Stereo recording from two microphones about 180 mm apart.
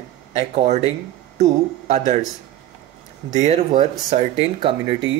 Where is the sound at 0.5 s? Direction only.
40° right (ahead or behind).